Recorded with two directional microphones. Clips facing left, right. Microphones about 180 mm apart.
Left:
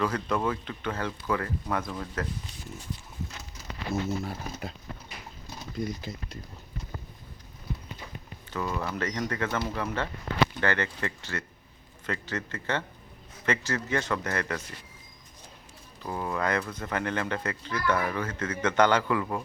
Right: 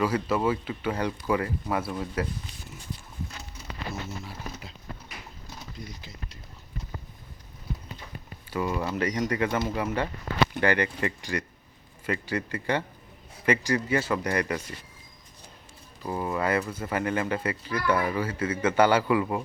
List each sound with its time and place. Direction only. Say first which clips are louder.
0.0 s speech: right 3 dB; 10° right (ahead or behind)
4.2 s speech: left 4 dB; 50° left (ahead or behind)
5.8 s speech: left 8 dB; 50° left (ahead or behind)
8.4 s speech: right 3 dB; 10° right (ahead or behind)
16.0 s speech: right 2 dB; 5° right (ahead or behind)